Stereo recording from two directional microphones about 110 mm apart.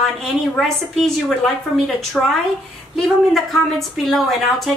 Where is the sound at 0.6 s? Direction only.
Centre (ahead or behind).